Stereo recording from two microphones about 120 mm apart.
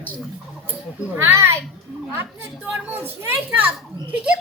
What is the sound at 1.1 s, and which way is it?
Speech, 20° right (ahead or behind).